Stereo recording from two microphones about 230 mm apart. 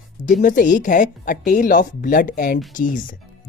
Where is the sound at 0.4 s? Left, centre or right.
Left.